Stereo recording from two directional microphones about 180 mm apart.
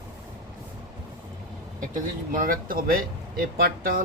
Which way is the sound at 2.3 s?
50° right (ahead or behind).